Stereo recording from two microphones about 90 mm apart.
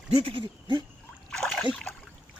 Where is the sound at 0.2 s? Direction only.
70° right (ahead or behind).